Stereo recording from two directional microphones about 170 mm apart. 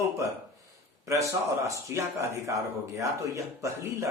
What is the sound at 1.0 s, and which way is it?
Speech, 20° right (ahead or behind).